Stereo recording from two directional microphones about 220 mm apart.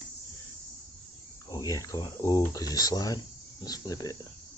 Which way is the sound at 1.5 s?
15° left (ahead or behind).